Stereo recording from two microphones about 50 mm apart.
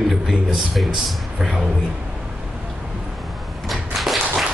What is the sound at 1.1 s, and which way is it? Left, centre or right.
Speech, centre.